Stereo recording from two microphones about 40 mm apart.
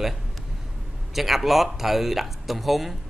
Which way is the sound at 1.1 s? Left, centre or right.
Centre.